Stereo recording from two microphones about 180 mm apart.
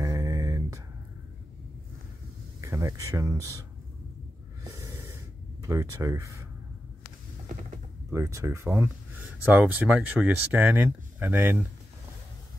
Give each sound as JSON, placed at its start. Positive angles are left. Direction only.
{"t": 0.0, "sound": "a sound", "side_deg": -20}
{"t": 2.6, "sound": "speech", "side_deg": -15}
{"t": 4.6, "sound": "gasp", "side_deg": -15}
{"t": 8.1, "sound": "speech", "side_deg": -15}